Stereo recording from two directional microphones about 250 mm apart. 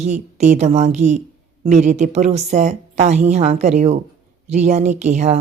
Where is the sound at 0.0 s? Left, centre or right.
Right.